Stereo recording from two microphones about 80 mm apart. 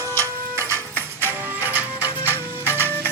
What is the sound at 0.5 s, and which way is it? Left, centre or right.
Music, right.